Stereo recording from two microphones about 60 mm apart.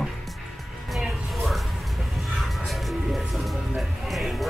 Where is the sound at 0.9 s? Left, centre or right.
Centre.